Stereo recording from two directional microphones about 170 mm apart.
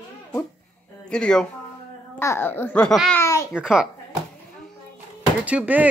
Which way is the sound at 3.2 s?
15° left (ahead or behind).